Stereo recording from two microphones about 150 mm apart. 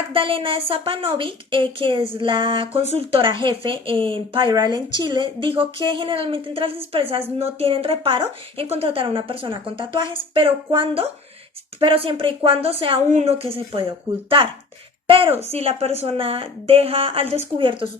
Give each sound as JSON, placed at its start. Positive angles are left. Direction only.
{"t": 0.1, "sound": "a woman's voice", "side_deg": -35}
{"t": 15.0, "sound": "a woman's voice", "side_deg": -40}